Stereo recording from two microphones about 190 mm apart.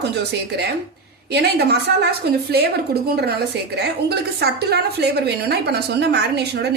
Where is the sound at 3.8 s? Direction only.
60° right (ahead or behind).